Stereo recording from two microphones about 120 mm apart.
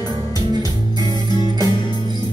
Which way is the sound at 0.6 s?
35° left (ahead or behind).